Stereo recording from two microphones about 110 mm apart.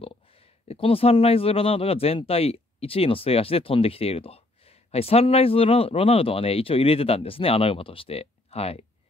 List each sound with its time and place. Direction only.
0.7 s speech: 60° left (ahead or behind)